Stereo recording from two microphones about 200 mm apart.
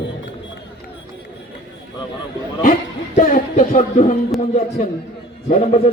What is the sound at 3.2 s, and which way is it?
Speech, 35° left (ahead or behind).